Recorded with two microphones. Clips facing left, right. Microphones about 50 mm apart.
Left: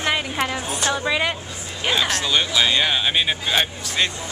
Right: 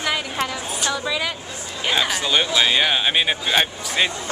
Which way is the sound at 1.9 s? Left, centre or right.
Centre.